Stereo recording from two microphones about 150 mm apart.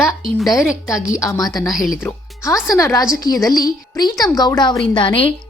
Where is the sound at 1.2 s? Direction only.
25° left (ahead or behind).